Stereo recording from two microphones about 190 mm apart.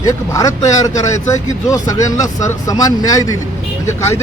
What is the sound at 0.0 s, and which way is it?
Speech, 15° left (ahead or behind).